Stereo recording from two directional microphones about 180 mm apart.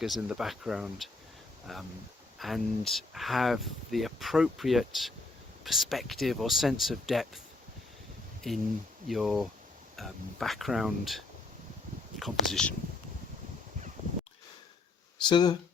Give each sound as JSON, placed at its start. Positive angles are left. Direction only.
{"t": 0.0, "sound": "speech", "side_deg": -5}
{"t": 8.4, "sound": "speech", "side_deg": 0}
{"t": 12.2, "sound": "speech", "side_deg": 5}
{"t": 15.2, "sound": "speech", "side_deg": 25}